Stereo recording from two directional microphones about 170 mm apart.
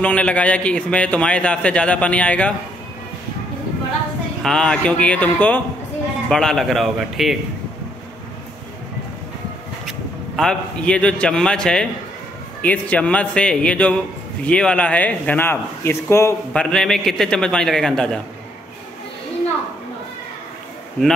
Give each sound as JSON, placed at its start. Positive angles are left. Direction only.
{"t": 0.0, "sound": "a man's voice", "side_deg": 10}
{"t": 4.4, "sound": "a man's voice", "side_deg": 5}
{"t": 9.8, "sound": "a man's voice", "side_deg": 0}
{"t": 16.7, "sound": "a man's voice", "side_deg": 0}